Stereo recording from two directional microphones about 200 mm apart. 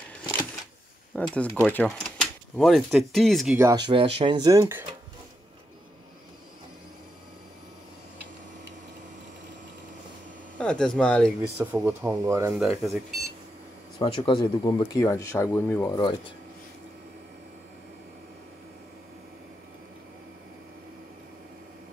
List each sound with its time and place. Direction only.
1.1 s speech: 5° left (ahead or behind)
3.5 s speech: 20° right (ahead or behind)
10.6 s speech: 5° left (ahead or behind)
11.5 s speech: 10° right (ahead or behind)
12.5 s speech: centre (ahead or behind)
13.9 s speech: 25° left (ahead or behind)
15.9 s speech: 20° left (ahead or behind)